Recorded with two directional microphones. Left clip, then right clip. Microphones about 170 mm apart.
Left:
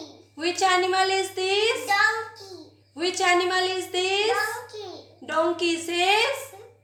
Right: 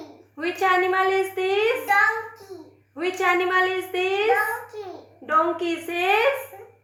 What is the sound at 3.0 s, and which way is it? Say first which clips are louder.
A woman's voice: even; 35° left (ahead or behind).